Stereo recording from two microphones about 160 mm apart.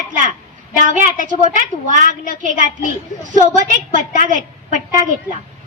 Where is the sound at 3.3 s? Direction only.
55° right (ahead or behind).